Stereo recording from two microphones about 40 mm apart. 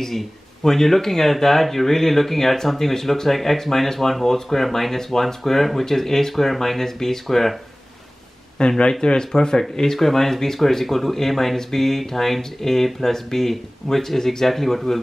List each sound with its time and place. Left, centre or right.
0.7 s speech: centre
8.5 s speech: left; by 15.0 s centre